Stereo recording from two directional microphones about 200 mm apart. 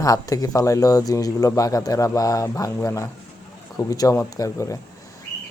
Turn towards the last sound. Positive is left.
turn(degrees=15)  # may be behind; listen again after turning